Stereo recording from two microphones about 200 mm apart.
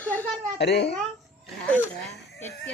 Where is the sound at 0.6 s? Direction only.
55° left (ahead or behind).